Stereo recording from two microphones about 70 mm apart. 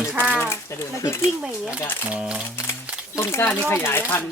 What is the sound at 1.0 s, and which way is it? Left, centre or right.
Speech, left.